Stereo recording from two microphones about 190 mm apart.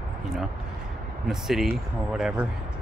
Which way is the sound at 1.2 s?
Centre (ahead or behind).